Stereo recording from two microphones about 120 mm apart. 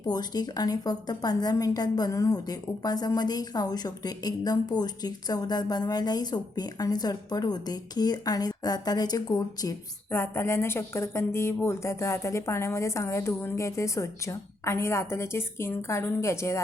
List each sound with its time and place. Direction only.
0.0 s a woman's voice: 35° left (ahead or behind)
10.1 s a woman's voice: 20° left (ahead or behind)